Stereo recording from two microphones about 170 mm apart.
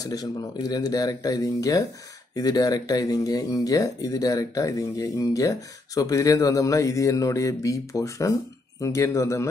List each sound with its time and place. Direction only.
0.0 s speech: 20° left (ahead or behind)